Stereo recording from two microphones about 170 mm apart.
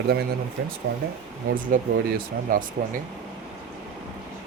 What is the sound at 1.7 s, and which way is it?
Speech, 55° right (ahead or behind).